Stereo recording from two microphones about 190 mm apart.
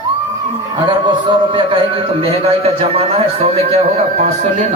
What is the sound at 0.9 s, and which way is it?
A man's voice, 25° right (ahead or behind).